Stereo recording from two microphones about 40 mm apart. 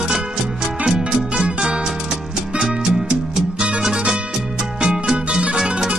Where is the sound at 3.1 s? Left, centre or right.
Right.